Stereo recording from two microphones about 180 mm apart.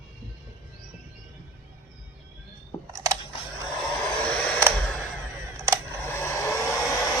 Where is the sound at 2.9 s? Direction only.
20° right (ahead or behind).